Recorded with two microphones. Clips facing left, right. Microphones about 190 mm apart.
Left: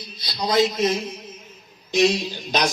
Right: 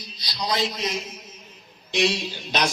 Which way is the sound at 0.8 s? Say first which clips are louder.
Left 7 dB; 50° left (ahead or behind).